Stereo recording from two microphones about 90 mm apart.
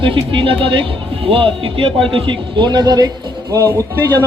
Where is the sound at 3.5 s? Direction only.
30° right (ahead or behind).